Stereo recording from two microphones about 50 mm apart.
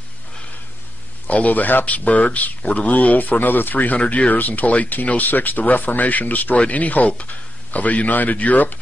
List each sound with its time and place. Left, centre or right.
1.2 s speech: left